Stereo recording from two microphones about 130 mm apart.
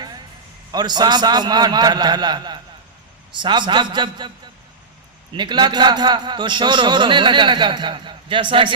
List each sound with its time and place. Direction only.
0.7 s a man's voice: 35° right (ahead or behind)
5.3 s a man's voice: 35° right (ahead or behind)